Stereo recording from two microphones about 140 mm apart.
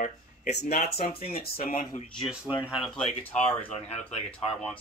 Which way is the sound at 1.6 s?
75° left (ahead or behind).